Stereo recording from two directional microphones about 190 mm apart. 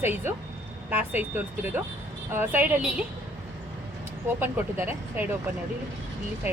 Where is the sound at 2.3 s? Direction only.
10° right (ahead or behind).